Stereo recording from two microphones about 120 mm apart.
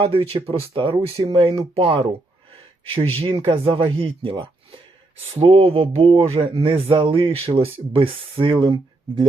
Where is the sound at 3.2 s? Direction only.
45° right (ahead or behind).